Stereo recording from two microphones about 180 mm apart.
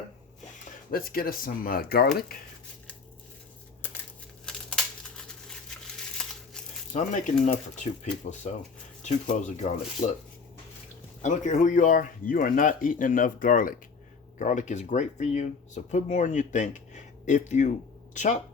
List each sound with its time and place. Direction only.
0.6 s speech: 55° left (ahead or behind)
4.4 s crumpling: 5° left (ahead or behind)
6.9 s speech: 45° left (ahead or behind)
11.2 s speech: 45° left (ahead or behind)